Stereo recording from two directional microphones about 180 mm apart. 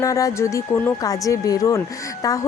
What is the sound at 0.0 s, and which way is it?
Speech, 20° left (ahead or behind).